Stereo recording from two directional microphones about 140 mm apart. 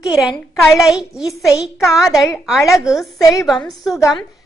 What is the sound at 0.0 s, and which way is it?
A woman's voice, 5° right (ahead or behind).